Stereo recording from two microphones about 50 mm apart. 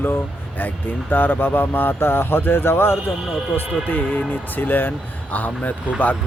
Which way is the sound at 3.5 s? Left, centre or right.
Left.